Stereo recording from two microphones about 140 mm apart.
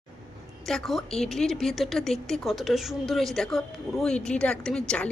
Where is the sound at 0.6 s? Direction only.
Centre (ahead or behind).